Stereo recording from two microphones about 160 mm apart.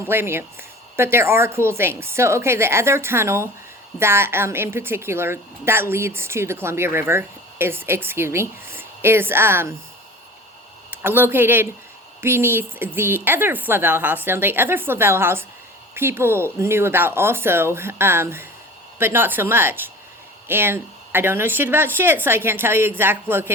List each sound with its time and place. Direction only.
0.0 s a woman's voice: 15° right (ahead or behind)
10.9 s a woman's voice: 15° right (ahead or behind)